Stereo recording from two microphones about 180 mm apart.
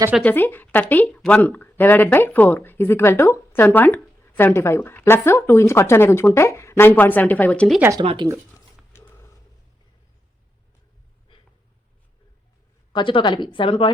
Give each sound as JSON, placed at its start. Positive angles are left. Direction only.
{"t": 0.2, "sound": "speech", "side_deg": 10}
{"t": 7.8, "sound": "speech", "side_deg": -15}
{"t": 8.0, "sound": "speech", "side_deg": -25}
{"t": 8.5, "sound": "dog", "side_deg": 15}
{"t": 12.9, "sound": "a woman's voice", "side_deg": 25}